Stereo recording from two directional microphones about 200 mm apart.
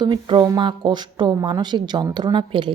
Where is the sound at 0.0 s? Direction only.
20° right (ahead or behind).